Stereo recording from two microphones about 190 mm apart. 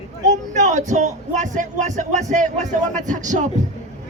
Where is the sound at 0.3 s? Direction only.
40° right (ahead or behind).